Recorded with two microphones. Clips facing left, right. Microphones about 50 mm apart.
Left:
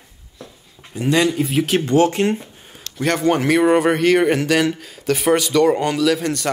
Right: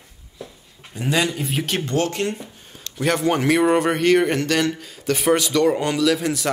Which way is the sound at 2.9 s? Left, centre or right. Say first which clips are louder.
Left 2 dB; centre.